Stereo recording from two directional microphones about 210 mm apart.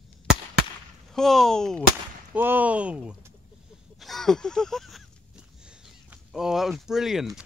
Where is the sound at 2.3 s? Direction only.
10° right (ahead or behind).